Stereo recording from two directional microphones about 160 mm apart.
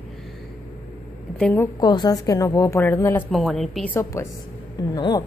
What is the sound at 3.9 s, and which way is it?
Speech, 20° left (ahead or behind).